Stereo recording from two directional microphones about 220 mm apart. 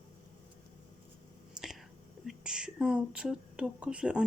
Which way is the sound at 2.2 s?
5° right (ahead or behind).